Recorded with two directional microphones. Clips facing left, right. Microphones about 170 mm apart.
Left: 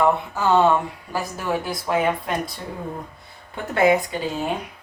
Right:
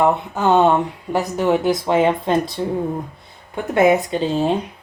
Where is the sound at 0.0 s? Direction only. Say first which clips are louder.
Right 3 dB; 20° right (ahead or behind).